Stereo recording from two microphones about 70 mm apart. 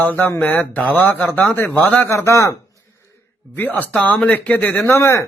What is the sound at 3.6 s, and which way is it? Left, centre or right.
Speech, left.